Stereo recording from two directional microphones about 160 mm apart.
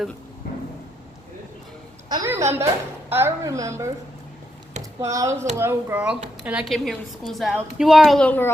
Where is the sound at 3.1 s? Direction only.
15° right (ahead or behind).